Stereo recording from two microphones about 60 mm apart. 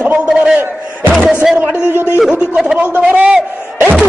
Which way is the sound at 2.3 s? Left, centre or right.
Centre.